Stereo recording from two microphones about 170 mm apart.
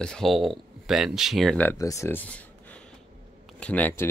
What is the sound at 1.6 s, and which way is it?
Speech, 20° left (ahead or behind).